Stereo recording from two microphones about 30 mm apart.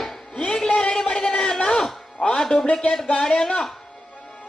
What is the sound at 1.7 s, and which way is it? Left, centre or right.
Music, centre.